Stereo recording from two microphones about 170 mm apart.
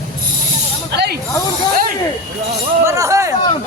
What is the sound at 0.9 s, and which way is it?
Snake, 75° right (ahead or behind).